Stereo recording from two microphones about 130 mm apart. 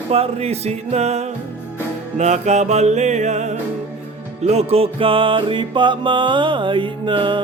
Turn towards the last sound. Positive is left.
turn(degrees=-40)  # may be behind; listen again after turning